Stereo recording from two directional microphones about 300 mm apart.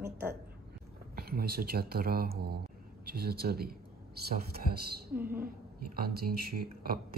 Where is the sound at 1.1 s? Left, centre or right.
Right.